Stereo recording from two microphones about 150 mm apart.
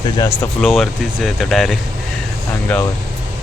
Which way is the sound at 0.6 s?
Centre (ahead or behind).